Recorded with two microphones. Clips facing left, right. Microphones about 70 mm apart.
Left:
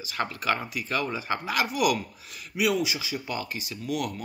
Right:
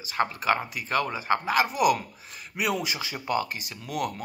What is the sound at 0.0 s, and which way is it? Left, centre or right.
Speech, right.